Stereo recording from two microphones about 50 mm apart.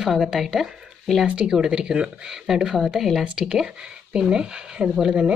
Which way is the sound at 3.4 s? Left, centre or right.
Centre.